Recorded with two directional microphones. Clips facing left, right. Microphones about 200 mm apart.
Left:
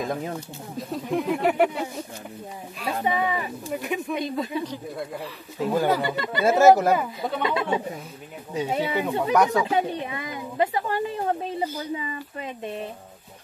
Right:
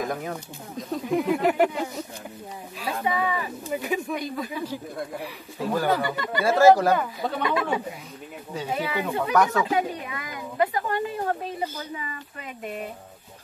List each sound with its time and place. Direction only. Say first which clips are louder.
0.0 s speech: left 1 dB; 25° left (ahead or behind)
0.7 s speech: right 1 dB; centre (ahead or behind)
3.0 s speech: left 1 dB; 25° left (ahead or behind)
3.7 s speech: right 1 dB; centre (ahead or behind)
4.1 s speech: left 3 dB; 20° left (ahead or behind)
6.9 s speech: left 1 dB; 5° left (ahead or behind)
7.4 s speech: left 1 dB; 25° left (ahead or behind)